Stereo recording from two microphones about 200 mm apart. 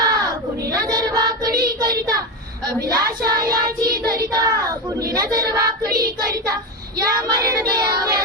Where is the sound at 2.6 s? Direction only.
20° right (ahead or behind).